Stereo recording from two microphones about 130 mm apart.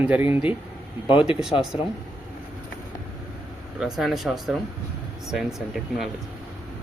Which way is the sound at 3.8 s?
Centre (ahead or behind).